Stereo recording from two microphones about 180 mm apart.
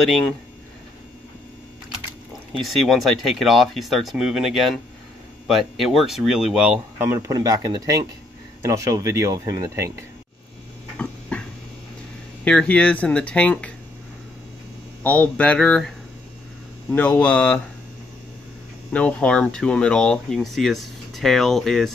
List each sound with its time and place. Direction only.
0.0 s speech: centre (ahead or behind)
2.5 s speech: centre (ahead or behind); by 9.9 s 20° right (ahead or behind)
11.0 s a sound: 5° left (ahead or behind)
12.4 s speech: 5° left (ahead or behind)
15.0 s speech: 10° left (ahead or behind)
16.9 s speech: 10° left (ahead or behind)
18.9 s speech: 5° left (ahead or behind)